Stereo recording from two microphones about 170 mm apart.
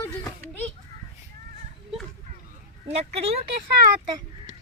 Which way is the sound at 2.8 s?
40° right (ahead or behind).